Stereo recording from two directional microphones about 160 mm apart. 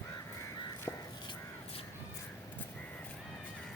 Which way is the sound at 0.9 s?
20° left (ahead or behind).